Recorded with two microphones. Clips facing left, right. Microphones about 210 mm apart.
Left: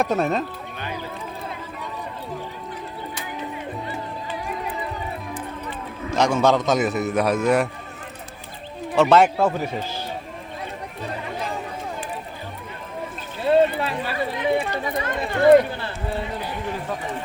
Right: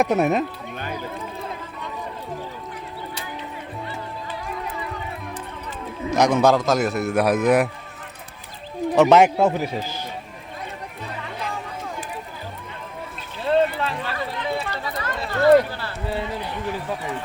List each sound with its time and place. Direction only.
0.0 s a man's voice: 15° right (ahead or behind)
6.1 s a man's voice: 15° right (ahead or behind)
9.0 s speech: 20° right (ahead or behind)
13.5 s a sound: 10° left (ahead or behind)